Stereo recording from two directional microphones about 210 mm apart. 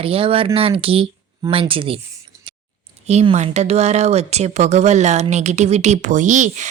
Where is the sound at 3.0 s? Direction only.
30° right (ahead or behind).